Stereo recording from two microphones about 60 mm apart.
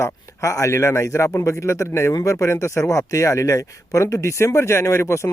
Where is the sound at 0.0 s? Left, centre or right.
Left.